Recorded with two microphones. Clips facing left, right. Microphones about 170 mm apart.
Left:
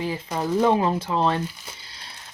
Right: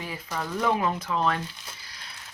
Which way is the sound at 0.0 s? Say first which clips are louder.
Left 7 dB; 25° left (ahead or behind).